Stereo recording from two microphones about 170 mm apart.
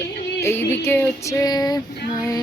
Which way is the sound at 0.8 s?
15° left (ahead or behind).